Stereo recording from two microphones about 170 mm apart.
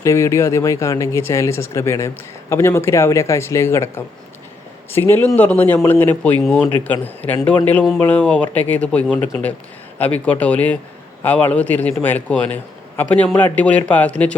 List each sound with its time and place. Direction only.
0.0 s speech: 15° left (ahead or behind)